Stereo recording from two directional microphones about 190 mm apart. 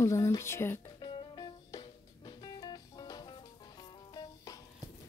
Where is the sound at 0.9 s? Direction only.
25° left (ahead or behind).